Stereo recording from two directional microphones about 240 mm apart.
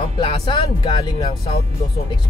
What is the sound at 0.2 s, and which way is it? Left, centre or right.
Music, centre.